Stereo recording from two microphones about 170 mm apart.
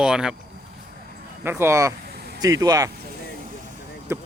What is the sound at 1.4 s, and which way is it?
Speech, 15° right (ahead or behind).